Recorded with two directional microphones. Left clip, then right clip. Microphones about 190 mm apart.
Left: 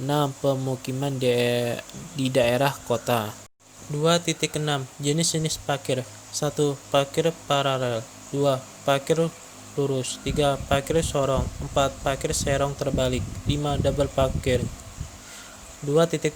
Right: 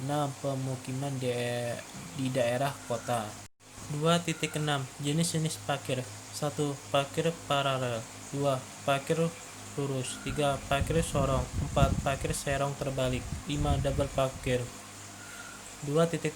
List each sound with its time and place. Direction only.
0.1 s speech: 45° left (ahead or behind)
4.0 s speech: 30° left (ahead or behind)
16.0 s speech: 30° left (ahead or behind)